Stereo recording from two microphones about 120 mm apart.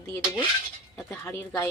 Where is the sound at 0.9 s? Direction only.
20° left (ahead or behind).